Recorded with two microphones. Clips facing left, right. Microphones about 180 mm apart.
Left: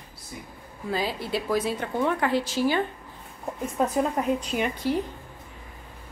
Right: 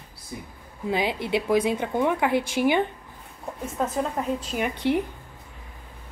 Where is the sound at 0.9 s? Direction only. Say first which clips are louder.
Right 3 dB; 20° right (ahead or behind).